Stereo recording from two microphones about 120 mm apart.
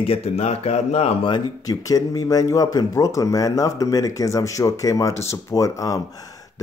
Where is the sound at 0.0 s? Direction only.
55° left (ahead or behind).